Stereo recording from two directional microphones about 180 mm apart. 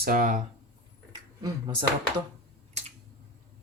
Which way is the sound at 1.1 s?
25° right (ahead or behind).